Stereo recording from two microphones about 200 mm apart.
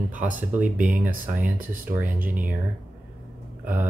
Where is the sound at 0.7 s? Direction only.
40° right (ahead or behind).